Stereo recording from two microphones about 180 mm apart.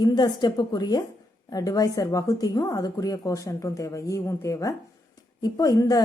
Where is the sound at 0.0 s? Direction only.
25° left (ahead or behind).